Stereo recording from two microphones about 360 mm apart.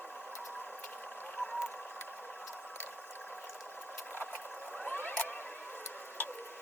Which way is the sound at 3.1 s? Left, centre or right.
Centre.